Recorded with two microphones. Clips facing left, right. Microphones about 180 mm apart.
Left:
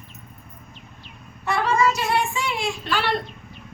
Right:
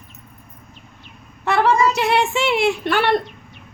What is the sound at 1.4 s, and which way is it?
Speech, 75° right (ahead or behind).